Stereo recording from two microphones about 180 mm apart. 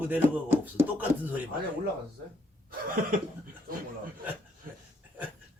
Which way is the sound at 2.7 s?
50° right (ahead or behind).